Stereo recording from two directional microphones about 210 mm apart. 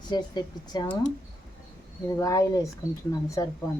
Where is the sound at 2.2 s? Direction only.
15° left (ahead or behind).